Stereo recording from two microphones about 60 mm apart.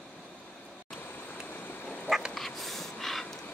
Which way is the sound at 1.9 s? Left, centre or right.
Centre.